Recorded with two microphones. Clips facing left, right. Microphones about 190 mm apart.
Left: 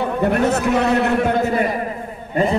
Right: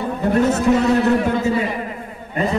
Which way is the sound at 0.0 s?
65° left (ahead or behind).